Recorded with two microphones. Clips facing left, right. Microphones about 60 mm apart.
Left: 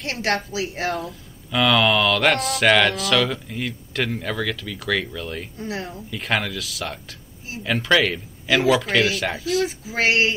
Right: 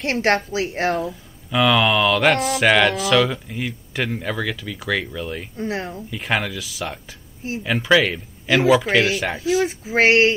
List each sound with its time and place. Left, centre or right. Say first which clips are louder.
0.0 s speech: right 5 dB; right
1.5 s speech: right 1 dB; centre
5.6 s speech: right 5 dB; right
6.0 s speech: even; centre
9.7 s speech: right 5 dB; right